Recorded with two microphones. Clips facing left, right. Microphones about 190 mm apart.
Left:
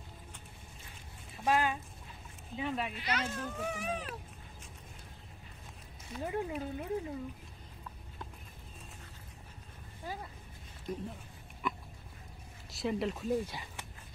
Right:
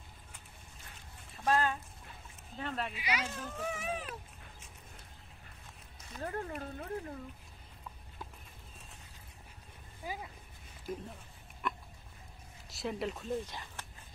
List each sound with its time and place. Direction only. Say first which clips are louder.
1.4 s speech: even; 10° left (ahead or behind)
2.9 s speech: left 1 dB; 10° right (ahead or behind)
6.1 s speech: left 3 dB; 10° left (ahead or behind)
10.0 s speech: even; 10° right (ahead or behind)
11.6 s dog: left 1 dB; centre (ahead or behind)
12.6 s speech: left 3 dB; centre (ahead or behind)